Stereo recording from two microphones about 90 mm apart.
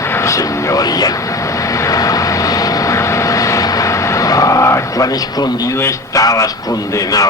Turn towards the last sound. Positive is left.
turn(degrees=40)  # may be behind; listen again after turning